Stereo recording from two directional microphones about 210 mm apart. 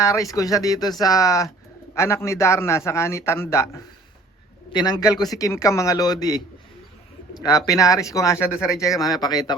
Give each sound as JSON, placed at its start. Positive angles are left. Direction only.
{"t": 0.0, "sound": "a man's voice", "side_deg": 15}
{"t": 4.7, "sound": "a man's voice", "side_deg": 20}
{"t": 7.4, "sound": "a man's voice", "side_deg": 15}